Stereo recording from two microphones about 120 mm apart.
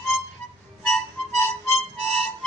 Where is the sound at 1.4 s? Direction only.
20° left (ahead or behind).